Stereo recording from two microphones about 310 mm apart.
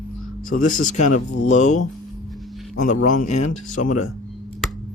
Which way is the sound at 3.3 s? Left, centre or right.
Left.